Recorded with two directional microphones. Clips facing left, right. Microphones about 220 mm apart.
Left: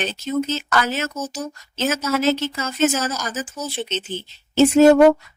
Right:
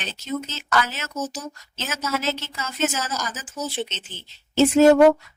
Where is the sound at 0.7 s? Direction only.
50° left (ahead or behind).